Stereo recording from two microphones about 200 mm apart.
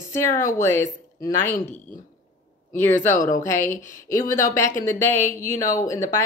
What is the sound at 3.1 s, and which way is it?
A woman's voice, 40° left (ahead or behind).